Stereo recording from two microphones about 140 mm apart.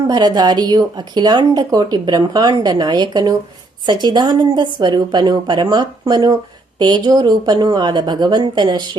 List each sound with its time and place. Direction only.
0.1 s speech: 30° right (ahead or behind)